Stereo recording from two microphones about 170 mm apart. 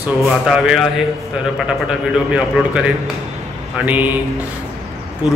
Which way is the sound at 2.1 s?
5° right (ahead or behind).